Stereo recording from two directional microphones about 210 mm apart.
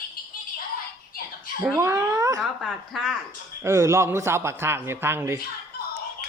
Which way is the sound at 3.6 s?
15° right (ahead or behind).